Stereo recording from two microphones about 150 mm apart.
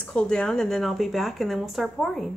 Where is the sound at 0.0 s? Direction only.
5° left (ahead or behind).